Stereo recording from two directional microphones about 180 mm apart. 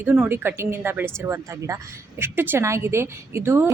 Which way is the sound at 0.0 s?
10° right (ahead or behind).